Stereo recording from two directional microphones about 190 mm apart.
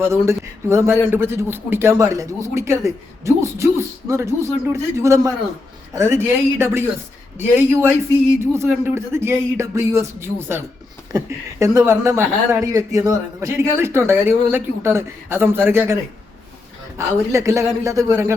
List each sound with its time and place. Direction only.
0.0 s speech: 15° right (ahead or behind)
17.0 s speech: 15° right (ahead or behind)